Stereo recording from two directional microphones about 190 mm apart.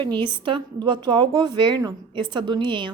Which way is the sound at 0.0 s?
25° right (ahead or behind).